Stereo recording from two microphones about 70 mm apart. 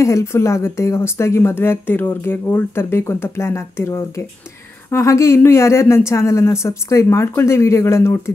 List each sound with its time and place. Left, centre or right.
0.0 s speech: left